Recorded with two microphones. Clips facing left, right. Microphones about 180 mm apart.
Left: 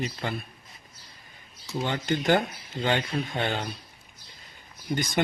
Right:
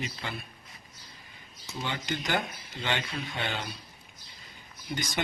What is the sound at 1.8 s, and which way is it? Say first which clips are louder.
Speech: left 7 dB; 50° left (ahead or behind).